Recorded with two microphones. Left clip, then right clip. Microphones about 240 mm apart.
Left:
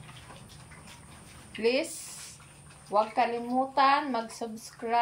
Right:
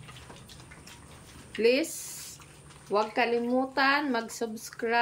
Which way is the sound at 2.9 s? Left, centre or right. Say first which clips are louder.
Left 1 dB; centre.